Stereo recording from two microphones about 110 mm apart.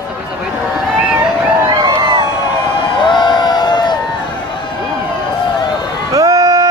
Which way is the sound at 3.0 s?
45° left (ahead or behind).